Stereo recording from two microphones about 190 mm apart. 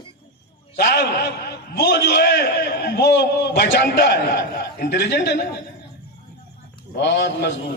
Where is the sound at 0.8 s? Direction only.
60° left (ahead or behind).